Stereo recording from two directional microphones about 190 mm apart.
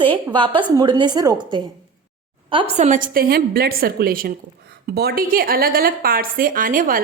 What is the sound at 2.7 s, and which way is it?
Speech, 35° right (ahead or behind).